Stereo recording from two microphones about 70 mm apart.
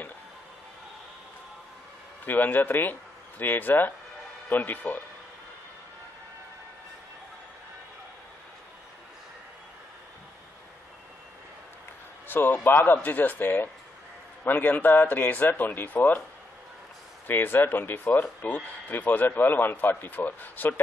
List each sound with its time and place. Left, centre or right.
2.2 s speech: left
12.3 s speech: left
17.3 s speech: left